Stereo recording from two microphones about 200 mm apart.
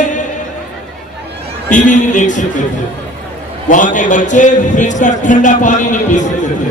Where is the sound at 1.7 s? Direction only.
40° left (ahead or behind).